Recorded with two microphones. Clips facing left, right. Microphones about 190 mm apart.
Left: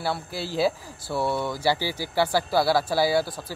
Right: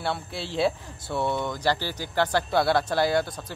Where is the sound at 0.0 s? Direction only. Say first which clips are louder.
Left 1 dB; centre (ahead or behind).